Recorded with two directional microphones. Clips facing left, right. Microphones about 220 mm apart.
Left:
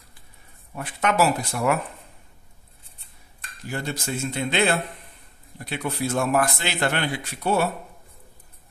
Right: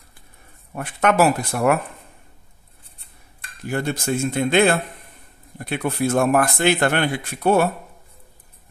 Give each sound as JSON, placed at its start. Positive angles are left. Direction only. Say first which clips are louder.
{"t": 0.7, "sound": "speech", "louder": "right 4 dB", "side_deg": -55}
{"t": 3.6, "sound": "speech", "louder": "right 6 dB", "side_deg": -55}